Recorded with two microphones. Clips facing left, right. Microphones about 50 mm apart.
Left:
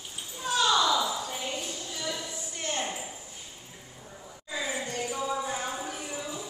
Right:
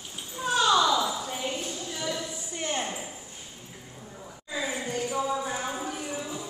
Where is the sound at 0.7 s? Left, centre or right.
Centre.